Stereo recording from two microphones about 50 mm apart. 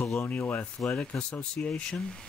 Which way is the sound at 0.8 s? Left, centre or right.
Centre.